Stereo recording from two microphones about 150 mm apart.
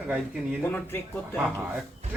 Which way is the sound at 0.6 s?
15° left (ahead or behind).